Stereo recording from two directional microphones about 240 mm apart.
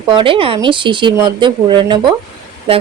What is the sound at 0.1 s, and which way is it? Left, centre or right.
A woman's voice, right.